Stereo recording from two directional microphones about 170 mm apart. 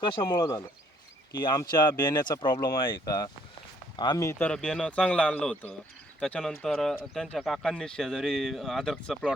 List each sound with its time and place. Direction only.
0.2 s speech: 20° left (ahead or behind); by 9.3 s centre (ahead or behind)